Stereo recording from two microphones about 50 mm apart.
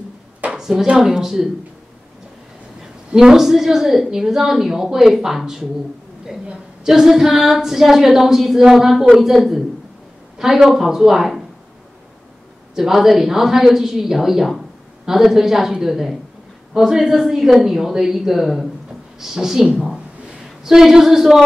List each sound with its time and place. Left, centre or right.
0.5 s speech: centre
3.2 s speech: centre
6.4 s a sound: right
6.9 s a woman's voice: centre
12.7 s a woman's voice: centre